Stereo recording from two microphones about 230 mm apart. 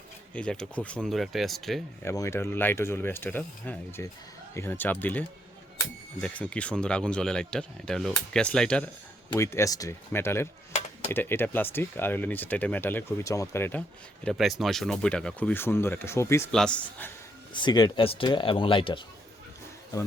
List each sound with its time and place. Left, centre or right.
0.3 s speech: centre
2.0 s speech: centre
6.2 s speech: centre
10.7 s a sound: left
11.1 s speech: centre
17.5 s speech: centre